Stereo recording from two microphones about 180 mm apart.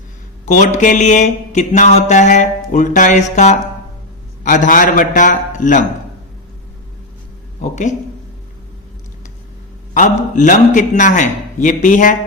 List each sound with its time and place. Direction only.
0.4 s mantra: 45° left (ahead or behind)
7.6 s mantra: 40° left (ahead or behind)
9.9 s mantra: 45° left (ahead or behind)